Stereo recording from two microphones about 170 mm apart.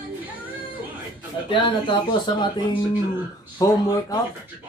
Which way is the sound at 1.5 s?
30° left (ahead or behind).